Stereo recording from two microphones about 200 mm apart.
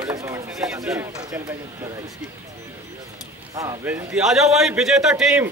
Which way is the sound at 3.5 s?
15° right (ahead or behind).